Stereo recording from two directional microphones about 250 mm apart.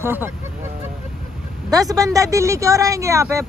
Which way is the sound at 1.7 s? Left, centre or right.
Centre.